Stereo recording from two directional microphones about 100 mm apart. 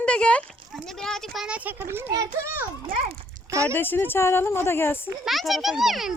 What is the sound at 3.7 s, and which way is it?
Speech, 20° left (ahead or behind).